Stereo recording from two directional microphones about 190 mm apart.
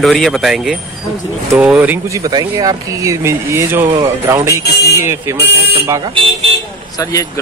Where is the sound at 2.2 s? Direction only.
20° right (ahead or behind).